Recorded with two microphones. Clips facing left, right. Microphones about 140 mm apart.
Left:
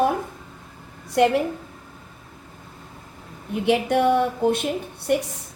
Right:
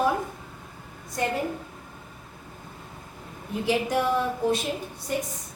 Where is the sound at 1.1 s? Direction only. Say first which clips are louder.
Left 10 dB; 75° left (ahead or behind).